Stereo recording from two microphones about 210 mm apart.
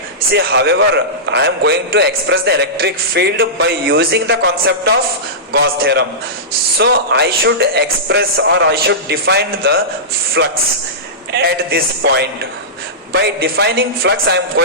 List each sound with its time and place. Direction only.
0.3 s a man's voice: 55° right (ahead or behind)